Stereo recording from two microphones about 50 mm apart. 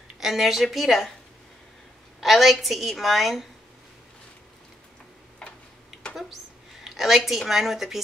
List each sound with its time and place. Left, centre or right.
0.2 s a woman's voice: centre
2.1 s a woman's voice: centre
5.4 s tick-tock: centre
6.8 s a woman's voice: centre